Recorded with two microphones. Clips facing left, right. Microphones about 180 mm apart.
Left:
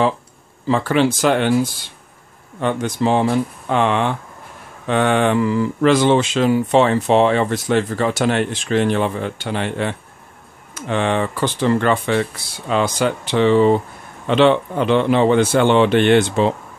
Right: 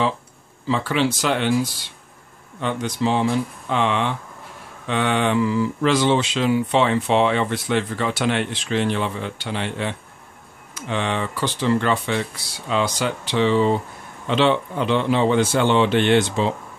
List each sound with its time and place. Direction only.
0.7 s a man's voice: 50° left (ahead or behind)